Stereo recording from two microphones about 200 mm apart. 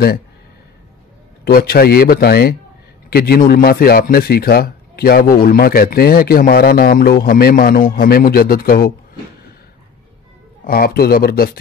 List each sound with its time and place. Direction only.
1.4 s a man's voice: 50° left (ahead or behind)
10.6 s a man's voice: 50° left (ahead or behind)